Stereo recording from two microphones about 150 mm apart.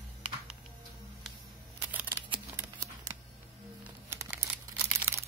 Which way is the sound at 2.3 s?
25° right (ahead or behind).